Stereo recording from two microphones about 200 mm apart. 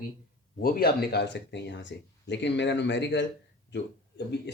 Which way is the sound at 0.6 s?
50° left (ahead or behind).